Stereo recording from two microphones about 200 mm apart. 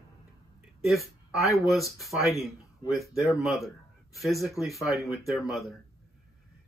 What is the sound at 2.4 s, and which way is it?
A man's voice, centre (ahead or behind).